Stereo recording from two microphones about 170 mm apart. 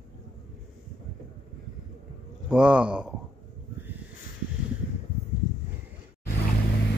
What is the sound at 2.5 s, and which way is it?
Speech, 5° right (ahead or behind).